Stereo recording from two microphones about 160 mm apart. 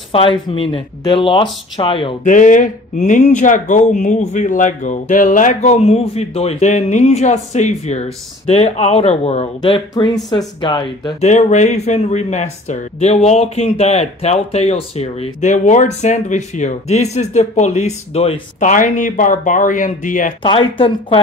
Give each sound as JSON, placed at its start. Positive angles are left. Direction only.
{"t": 0.1, "sound": "speech", "side_deg": 35}
{"t": 2.2, "sound": "speech", "side_deg": 50}
{"t": 11.2, "sound": "speech", "side_deg": 50}
{"t": 20.4, "sound": "speech", "side_deg": 35}